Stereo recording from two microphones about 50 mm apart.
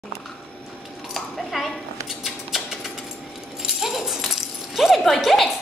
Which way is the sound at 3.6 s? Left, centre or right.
Centre.